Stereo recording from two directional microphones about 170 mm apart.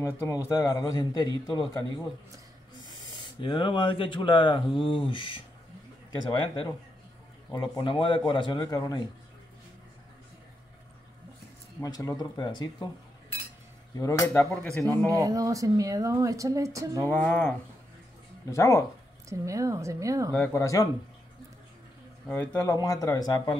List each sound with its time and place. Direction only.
0.0 s speech: 20° left (ahead or behind)
3.3 s speech: 30° left (ahead or behind)
6.4 s speech: 30° left (ahead or behind)
11.8 s speech: 20° left (ahead or behind)
13.9 s speech: 20° left (ahead or behind)
14.5 s speech: 5° left (ahead or behind)
15.0 s a woman's voice: 20° right (ahead or behind)
17.1 s speech: 10° left (ahead or behind)
19.2 s a woman's voice: 20° right (ahead or behind)
20.3 s speech: 15° left (ahead or behind)
22.3 s speech: 10° left (ahead or behind)